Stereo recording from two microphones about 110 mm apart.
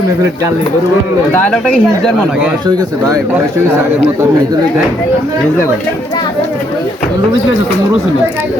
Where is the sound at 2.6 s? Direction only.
40° right (ahead or behind).